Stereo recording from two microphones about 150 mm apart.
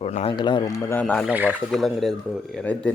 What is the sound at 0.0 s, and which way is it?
Speech, 45° left (ahead or behind).